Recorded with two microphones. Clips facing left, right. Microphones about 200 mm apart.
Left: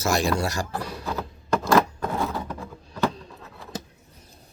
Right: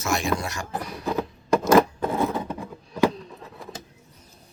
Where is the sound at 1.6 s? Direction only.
20° right (ahead or behind).